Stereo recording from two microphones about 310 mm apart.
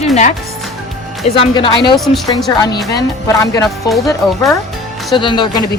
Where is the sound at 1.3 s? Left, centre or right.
Centre.